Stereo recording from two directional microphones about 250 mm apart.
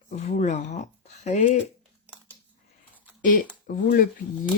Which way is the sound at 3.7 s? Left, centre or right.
Left.